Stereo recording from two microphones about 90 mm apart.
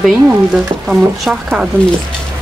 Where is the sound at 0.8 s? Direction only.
Centre (ahead or behind).